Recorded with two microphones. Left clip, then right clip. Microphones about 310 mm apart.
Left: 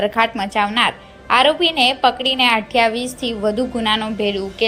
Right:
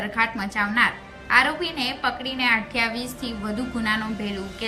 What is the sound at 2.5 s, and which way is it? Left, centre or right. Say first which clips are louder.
Speech: left 8 dB; centre.